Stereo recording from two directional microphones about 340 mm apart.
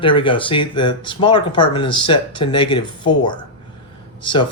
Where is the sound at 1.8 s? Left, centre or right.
Left.